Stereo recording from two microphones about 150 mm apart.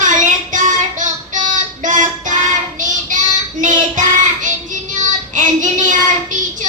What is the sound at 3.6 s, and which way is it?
Child singing, 60° right (ahead or behind).